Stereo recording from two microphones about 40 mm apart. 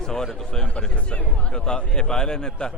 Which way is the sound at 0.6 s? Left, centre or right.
Left.